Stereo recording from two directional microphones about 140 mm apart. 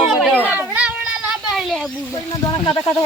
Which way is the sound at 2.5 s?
30° left (ahead or behind).